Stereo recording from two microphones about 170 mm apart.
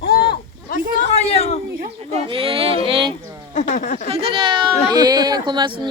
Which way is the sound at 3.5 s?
45° left (ahead or behind).